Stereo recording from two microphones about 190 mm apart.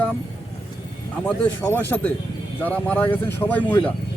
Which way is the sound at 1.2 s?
10° left (ahead or behind).